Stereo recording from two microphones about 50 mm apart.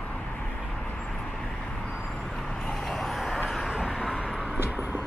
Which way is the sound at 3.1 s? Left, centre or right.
Centre.